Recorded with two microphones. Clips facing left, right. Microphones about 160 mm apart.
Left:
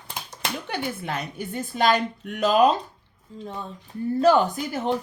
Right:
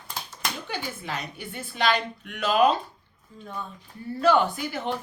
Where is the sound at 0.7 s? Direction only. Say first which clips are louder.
Left 4 dB; 60° left (ahead or behind).